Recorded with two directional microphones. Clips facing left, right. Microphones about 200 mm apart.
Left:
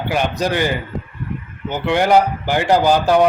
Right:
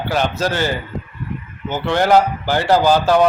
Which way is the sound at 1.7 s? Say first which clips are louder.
Even; 15° left (ahead or behind).